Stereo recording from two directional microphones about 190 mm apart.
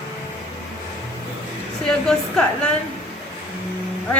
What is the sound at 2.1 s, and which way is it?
Speech, 5° left (ahead or behind).